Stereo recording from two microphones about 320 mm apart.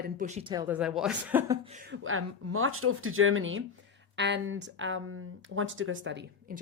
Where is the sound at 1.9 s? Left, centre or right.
Right.